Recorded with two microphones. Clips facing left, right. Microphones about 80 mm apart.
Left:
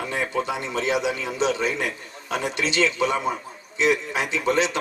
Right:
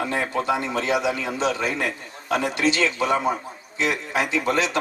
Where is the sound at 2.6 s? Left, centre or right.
Left.